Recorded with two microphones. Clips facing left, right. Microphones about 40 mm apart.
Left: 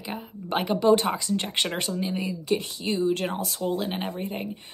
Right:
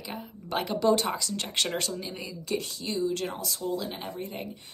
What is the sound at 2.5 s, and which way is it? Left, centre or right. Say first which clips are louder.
Speech: left 4 dB; left.